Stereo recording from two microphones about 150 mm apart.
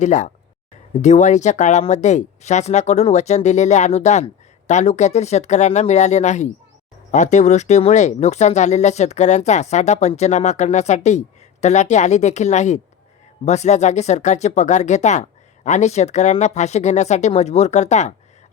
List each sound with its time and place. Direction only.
0.0 s speech: 55° left (ahead or behind)